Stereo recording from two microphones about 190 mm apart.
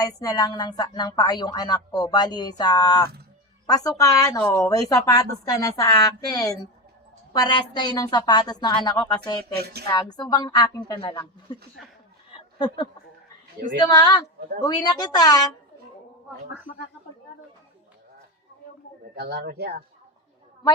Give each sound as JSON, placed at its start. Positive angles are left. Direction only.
{"t": 0.0, "sound": "a woman's voice", "side_deg": 20}
{"t": 9.6, "sound": "speech", "side_deg": -55}
{"t": 9.9, "sound": "a woman's voice", "side_deg": 20}
{"t": 12.5, "sound": "a woman's voice", "side_deg": 25}
{"t": 19.1, "sound": "speech", "side_deg": -60}